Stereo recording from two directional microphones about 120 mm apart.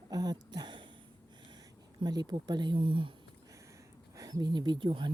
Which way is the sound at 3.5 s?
25° right (ahead or behind).